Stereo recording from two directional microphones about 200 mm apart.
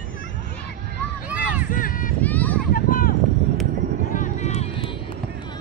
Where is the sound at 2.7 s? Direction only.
45° left (ahead or behind).